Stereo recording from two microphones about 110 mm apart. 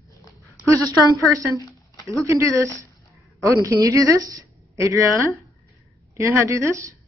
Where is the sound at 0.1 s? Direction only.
30° left (ahead or behind).